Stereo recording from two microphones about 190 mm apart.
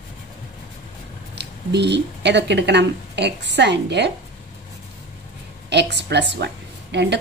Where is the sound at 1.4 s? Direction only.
65° right (ahead or behind).